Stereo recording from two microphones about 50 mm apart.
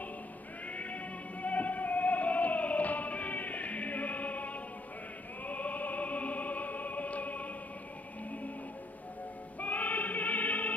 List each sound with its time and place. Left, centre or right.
1.4 s music: left
5.5 s music: left
9.6 s choir: left